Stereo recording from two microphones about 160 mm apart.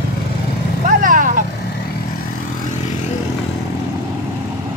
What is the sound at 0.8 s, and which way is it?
Vehicle, 55° right (ahead or behind).